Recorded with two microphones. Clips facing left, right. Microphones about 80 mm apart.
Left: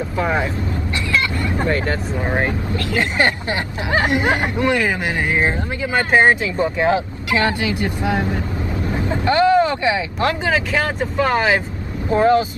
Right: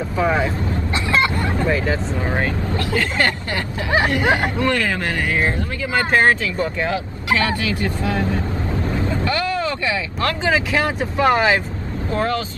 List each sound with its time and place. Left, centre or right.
0.2 s speech: centre
1.1 s vehicle: right
1.7 s speech: centre
2.2 s speech: centre
10.4 s speech: centre
12.1 s speech: left